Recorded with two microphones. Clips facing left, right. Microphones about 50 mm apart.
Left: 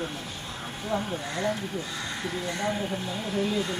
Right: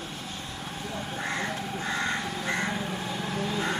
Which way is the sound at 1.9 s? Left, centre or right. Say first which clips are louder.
Right 4 dB; right.